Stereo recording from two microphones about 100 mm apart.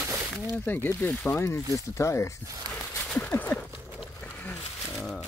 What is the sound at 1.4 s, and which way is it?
Speech, 25° left (ahead or behind).